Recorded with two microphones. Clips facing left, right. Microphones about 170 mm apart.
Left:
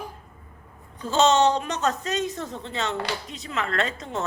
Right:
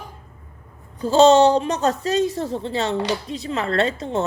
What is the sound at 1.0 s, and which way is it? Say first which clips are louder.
A woman's voice: right 7 dB; 35° right (ahead or behind).